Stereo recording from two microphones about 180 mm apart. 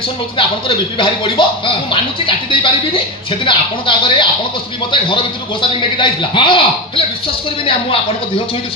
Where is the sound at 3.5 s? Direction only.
30° left (ahead or behind).